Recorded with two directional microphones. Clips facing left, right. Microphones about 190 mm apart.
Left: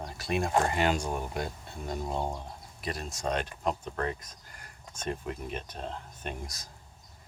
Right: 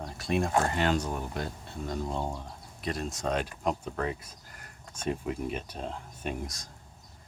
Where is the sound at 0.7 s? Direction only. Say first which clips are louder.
Even; 15° left (ahead or behind).